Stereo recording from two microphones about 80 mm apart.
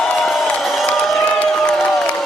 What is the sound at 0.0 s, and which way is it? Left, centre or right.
Crowd, centre.